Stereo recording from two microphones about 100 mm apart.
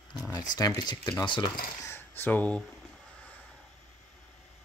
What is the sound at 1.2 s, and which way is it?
Speech, 55° left (ahead or behind).